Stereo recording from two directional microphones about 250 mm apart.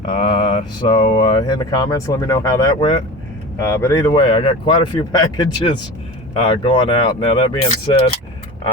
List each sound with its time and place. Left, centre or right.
0.1 s speech: left